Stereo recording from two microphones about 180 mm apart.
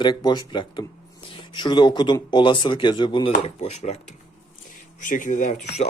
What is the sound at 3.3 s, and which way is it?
Speech, 40° left (ahead or behind).